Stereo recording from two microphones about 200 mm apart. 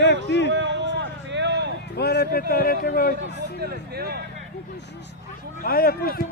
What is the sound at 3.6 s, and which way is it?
Speech, 50° right (ahead or behind).